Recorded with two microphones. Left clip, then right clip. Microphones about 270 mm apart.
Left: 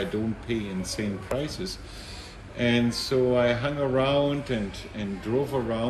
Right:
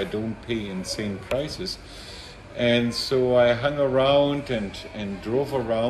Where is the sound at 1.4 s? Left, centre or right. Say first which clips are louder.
Right 2 dB; centre.